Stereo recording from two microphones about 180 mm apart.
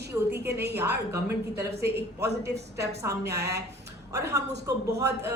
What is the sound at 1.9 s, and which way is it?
Speech, 65° right (ahead or behind).